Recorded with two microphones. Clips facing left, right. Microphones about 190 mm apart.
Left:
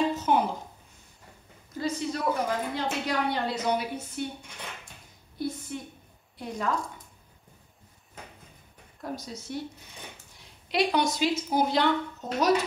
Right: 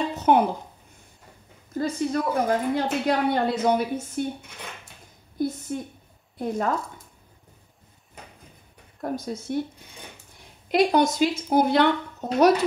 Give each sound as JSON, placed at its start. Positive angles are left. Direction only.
{"t": 0.1, "sound": "a sound", "side_deg": -60}
{"t": 1.8, "sound": "a woman's voice", "side_deg": -50}
{"t": 5.7, "sound": "a woman's voice", "side_deg": -45}
{"t": 9.0, "sound": "a woman's voice", "side_deg": -55}
{"t": 10.7, "sound": "a woman's voice", "side_deg": -50}
{"t": 11.5, "sound": "speech", "side_deg": -60}